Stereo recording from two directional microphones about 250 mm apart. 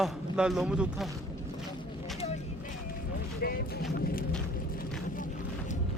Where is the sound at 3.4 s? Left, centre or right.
Left.